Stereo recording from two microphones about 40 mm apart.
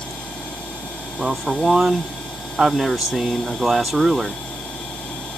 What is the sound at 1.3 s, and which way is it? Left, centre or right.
Speech, centre.